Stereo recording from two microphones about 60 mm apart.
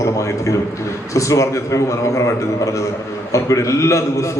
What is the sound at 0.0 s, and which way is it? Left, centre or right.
A man's voice, left.